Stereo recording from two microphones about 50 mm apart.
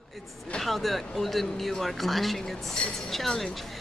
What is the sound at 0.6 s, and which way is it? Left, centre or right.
A woman's voice, centre.